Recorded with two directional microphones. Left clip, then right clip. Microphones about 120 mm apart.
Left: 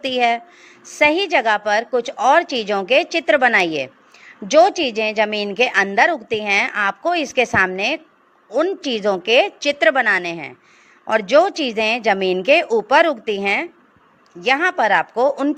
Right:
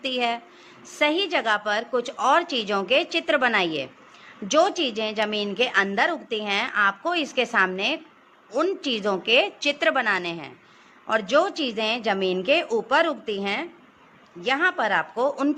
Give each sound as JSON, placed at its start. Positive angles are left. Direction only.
{"t": 0.0, "sound": "a woman's voice", "side_deg": 65}
{"t": 8.4, "sound": "a woman's voice", "side_deg": 50}
{"t": 14.4, "sound": "a woman's voice", "side_deg": 75}